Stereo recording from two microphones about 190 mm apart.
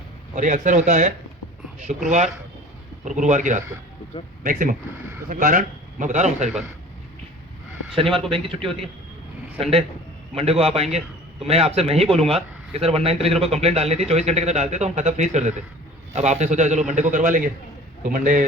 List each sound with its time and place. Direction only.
0.3 s a man's voice: 40° right (ahead or behind)
8.3 s a man's voice: 30° right (ahead or behind); by 18.4 s 45° right (ahead or behind)